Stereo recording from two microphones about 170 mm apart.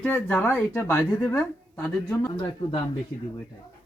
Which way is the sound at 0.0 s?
10° left (ahead or behind).